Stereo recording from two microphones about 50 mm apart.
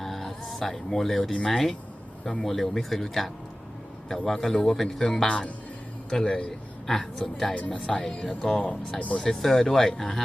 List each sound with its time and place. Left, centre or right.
0.0 s a sound: centre
1.5 s speech: centre
7.5 s speech: left
7.9 s speech: centre